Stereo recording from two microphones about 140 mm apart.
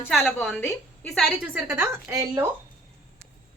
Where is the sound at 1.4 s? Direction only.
10° right (ahead or behind).